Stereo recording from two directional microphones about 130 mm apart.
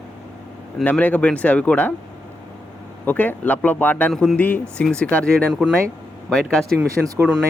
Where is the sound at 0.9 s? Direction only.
10° left (ahead or behind).